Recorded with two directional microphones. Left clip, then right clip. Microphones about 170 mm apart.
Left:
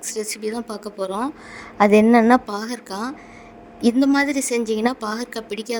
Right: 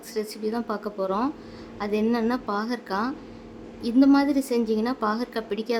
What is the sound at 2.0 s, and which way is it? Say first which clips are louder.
Speech: left 10 dB; 35° left (ahead or behind).